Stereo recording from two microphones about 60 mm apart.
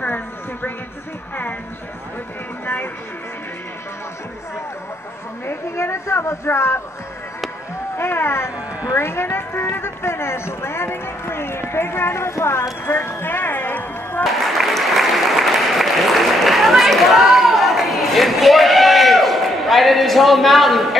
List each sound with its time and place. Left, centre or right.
0.0 s a sound: left
2.6 s music: left
5.8 s speech: left
8.0 s speech: left
12.8 s a sound: left
14.2 s applause: centre